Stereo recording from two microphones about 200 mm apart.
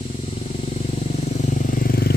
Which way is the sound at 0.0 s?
35° left (ahead or behind).